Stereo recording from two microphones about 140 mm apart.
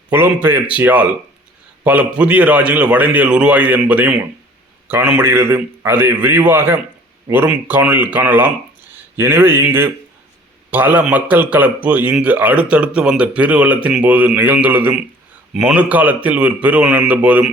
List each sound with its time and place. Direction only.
0.1 s a man's voice: 15° right (ahead or behind)